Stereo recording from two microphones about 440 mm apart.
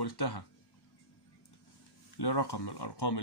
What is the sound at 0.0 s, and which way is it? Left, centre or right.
Speech, left.